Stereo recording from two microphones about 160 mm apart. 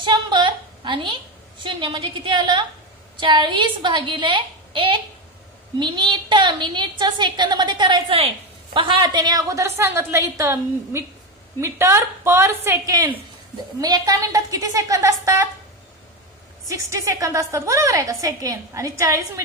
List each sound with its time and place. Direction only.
0.0 s a woman's voice: 30° right (ahead or behind)
16.6 s a woman's voice: 20° right (ahead or behind)